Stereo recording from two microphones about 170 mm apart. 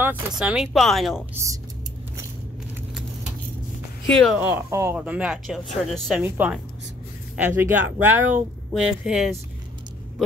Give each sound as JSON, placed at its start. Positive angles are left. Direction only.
{"t": 0.0, "sound": "speech", "side_deg": -5}
{"t": 1.3, "sound": "speech", "side_deg": -15}
{"t": 4.1, "sound": "speech", "side_deg": 5}
{"t": 4.4, "sound": "speech", "side_deg": -10}
{"t": 6.2, "sound": "speech", "side_deg": -10}